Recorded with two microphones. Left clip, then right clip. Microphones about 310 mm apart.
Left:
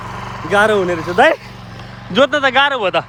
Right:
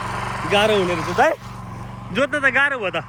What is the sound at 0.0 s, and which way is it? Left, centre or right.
Vehicle, right.